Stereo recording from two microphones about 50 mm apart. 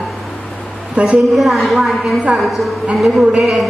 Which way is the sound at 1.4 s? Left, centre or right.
Centre.